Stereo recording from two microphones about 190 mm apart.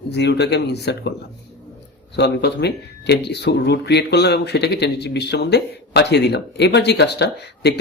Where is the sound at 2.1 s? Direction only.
60° left (ahead or behind).